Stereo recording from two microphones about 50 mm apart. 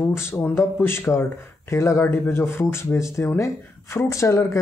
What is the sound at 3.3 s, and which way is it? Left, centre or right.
Speech, left.